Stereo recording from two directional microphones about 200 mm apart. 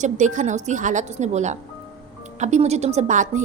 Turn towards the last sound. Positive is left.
turn(degrees=-40)  # may be behind; listen again after turning